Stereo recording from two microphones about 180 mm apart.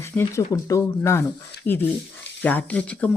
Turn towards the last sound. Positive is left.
turn(degrees=10)  # may be behind; listen again after turning